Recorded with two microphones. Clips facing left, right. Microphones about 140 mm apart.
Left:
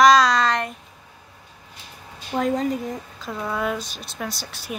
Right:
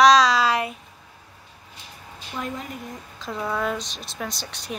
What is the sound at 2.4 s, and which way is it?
Speech, 90° left.